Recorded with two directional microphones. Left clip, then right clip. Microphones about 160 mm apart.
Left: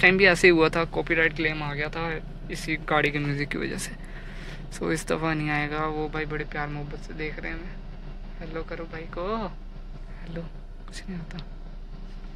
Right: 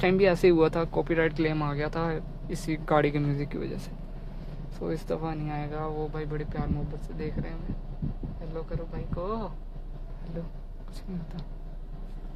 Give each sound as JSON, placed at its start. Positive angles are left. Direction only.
{"t": 0.0, "sound": "speech", "side_deg": -20}
{"t": 8.5, "sound": "speech", "side_deg": -10}